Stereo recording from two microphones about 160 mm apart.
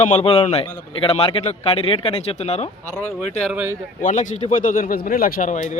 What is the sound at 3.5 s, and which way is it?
Speech, 10° right (ahead or behind).